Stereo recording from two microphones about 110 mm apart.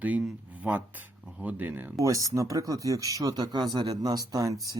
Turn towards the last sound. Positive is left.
turn(degrees=-30)  # may be behind; listen again after turning